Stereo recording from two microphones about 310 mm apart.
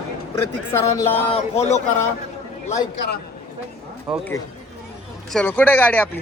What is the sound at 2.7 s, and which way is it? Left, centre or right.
Speech, left.